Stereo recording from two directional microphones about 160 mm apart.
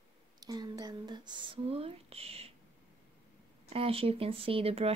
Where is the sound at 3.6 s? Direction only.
35° right (ahead or behind).